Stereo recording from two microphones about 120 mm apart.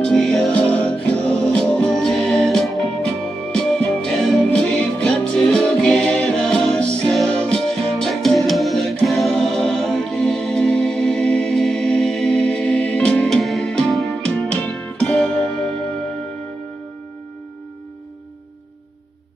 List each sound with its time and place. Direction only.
0.0 s music: 5° left (ahead or behind)